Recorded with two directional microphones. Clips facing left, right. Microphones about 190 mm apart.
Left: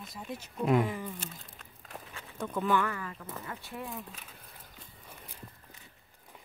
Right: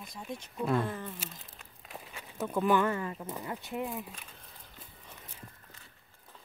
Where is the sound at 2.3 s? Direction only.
10° right (ahead or behind).